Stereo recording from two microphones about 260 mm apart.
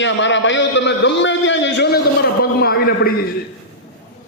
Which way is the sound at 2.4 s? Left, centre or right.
Left.